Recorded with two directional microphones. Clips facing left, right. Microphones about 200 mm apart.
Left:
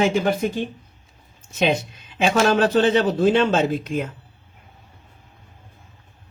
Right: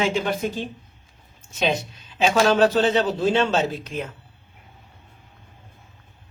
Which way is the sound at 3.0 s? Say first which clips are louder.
Left 3 dB; 55° left (ahead or behind).